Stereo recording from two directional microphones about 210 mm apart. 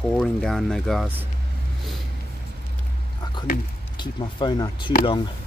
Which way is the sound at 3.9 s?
20° left (ahead or behind).